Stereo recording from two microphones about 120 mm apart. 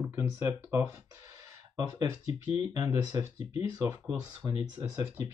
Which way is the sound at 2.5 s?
30° right (ahead or behind).